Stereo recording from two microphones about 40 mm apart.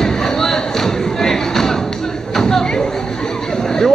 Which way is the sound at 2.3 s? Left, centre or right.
Centre.